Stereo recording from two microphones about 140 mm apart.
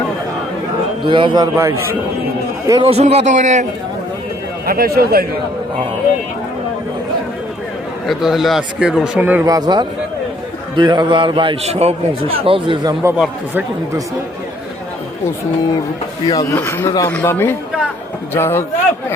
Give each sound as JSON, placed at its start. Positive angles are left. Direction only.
{"t": 1.0, "sound": "a man's voice", "side_deg": -35}
{"t": 1.5, "sound": "a man's voice", "side_deg": -20}
{"t": 2.6, "sound": "a man's voice", "side_deg": -30}
{"t": 2.9, "sound": "a man's voice", "side_deg": -50}
{"t": 4.6, "sound": "speech", "side_deg": -90}
{"t": 8.0, "sound": "a man's voice", "side_deg": 0}
{"t": 9.4, "sound": "a man's voice", "side_deg": -30}
{"t": 13.1, "sound": "a man's voice", "side_deg": -5}
{"t": 16.2, "sound": "speech", "side_deg": 25}